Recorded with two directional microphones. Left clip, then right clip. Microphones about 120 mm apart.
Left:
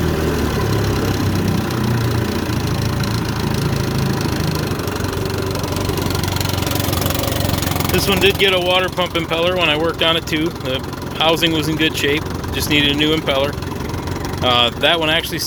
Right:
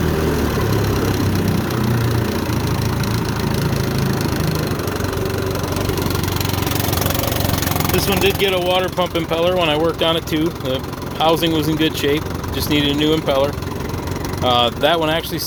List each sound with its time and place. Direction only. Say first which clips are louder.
7.8 s vehicle: left 3 dB; 10° right (ahead or behind)
8.4 s speech: left 2 dB; 25° right (ahead or behind); by 12.2 s 50° right (ahead or behind)
12.7 s speech: left 2 dB; 40° right (ahead or behind)
14.6 s speech: left 1 dB; 45° right (ahead or behind)